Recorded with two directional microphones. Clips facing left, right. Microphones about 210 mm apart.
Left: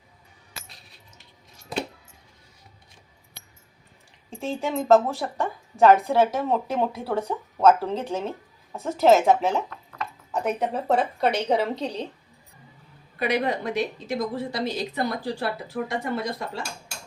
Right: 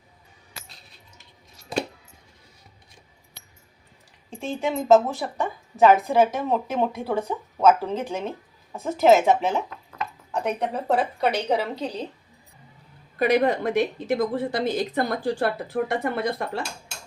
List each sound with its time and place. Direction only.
4.3 s a woman's voice: centre (ahead or behind)
13.1 s speech: 45° right (ahead or behind)